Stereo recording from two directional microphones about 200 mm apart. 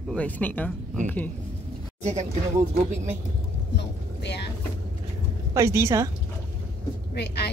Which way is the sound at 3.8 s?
60° left (ahead or behind).